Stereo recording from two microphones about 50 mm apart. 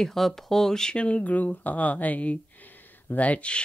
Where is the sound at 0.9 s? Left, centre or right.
Left.